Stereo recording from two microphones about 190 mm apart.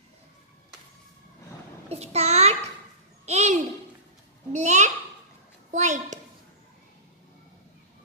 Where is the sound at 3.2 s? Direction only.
35° right (ahead or behind).